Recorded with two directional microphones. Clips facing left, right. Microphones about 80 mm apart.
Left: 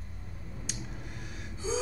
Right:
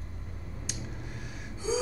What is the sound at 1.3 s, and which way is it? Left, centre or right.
Gasp, centre.